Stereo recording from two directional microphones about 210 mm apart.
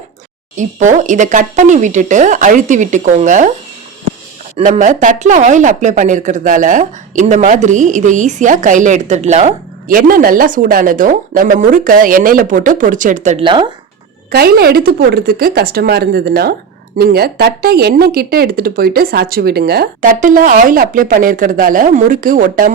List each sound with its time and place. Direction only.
0.5 s speech: 35° right (ahead or behind)
4.5 s speech: 35° right (ahead or behind)
13.4 s speech: 25° right (ahead or behind)
14.3 s a woman's voice: 45° right (ahead or behind)